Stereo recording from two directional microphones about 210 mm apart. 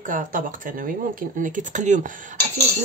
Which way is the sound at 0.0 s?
40° right (ahead or behind).